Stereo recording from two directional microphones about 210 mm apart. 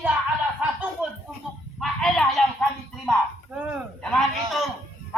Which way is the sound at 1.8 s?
Centre (ahead or behind).